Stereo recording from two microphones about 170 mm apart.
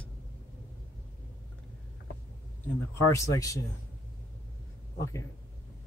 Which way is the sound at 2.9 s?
15° left (ahead or behind).